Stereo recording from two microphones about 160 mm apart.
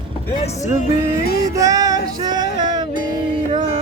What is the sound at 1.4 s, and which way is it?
Music, 20° right (ahead or behind).